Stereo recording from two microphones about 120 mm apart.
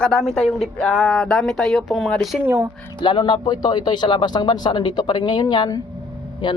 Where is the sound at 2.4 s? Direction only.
20° right (ahead or behind).